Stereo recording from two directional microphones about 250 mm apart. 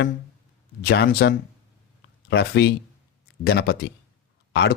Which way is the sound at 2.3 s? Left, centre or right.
Left.